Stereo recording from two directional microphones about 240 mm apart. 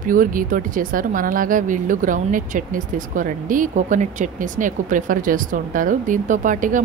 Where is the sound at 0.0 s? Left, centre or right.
Right.